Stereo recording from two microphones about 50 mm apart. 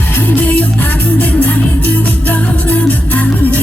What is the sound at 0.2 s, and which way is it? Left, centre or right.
Music, left.